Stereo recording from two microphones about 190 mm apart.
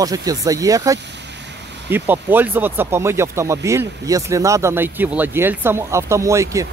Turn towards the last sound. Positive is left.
turn(degrees=-15)  # may be behind; listen again after turning